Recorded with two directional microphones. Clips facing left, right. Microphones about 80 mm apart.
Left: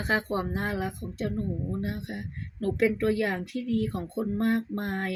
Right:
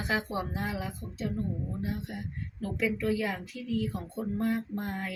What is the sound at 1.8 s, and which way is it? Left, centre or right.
Speech, left.